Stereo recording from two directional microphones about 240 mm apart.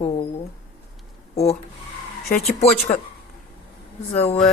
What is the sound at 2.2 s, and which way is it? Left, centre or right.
Speech, left.